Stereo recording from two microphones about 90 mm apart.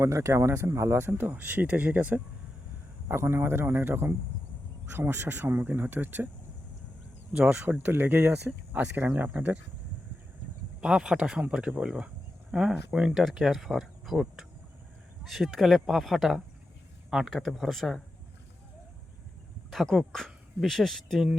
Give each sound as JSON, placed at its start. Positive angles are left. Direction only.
{"t": 0.0, "sound": "speech", "side_deg": -30}
{"t": 7.3, "sound": "speech", "side_deg": -15}
{"t": 10.8, "sound": "speech", "side_deg": -10}
{"t": 19.7, "sound": "speech", "side_deg": 0}